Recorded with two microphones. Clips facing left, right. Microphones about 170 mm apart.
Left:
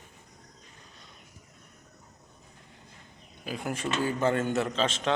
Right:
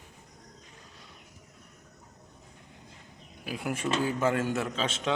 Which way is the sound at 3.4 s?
5° right (ahead or behind).